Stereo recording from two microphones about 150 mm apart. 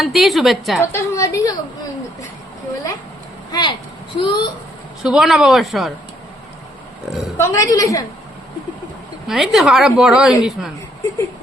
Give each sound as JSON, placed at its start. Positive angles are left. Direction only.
{"t": 0.0, "sound": "a woman's voice", "side_deg": 0}
{"t": 0.9, "sound": "a woman's voice", "side_deg": 20}
{"t": 3.5, "sound": "speech", "side_deg": 30}
{"t": 5.0, "sound": "a woman's voice", "side_deg": -5}
{"t": 7.1, "sound": "a woman's voice", "side_deg": 0}
{"t": 7.3, "sound": "a woman's voice", "side_deg": 20}
{"t": 9.2, "sound": "a woman's voice", "side_deg": 0}